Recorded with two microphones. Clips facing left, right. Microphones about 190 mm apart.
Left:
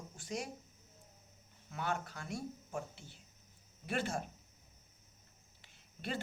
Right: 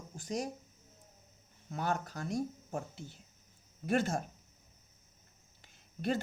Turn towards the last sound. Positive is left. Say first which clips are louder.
# right 8 dB
turn(degrees=-45)  # may be behind; listen again after turning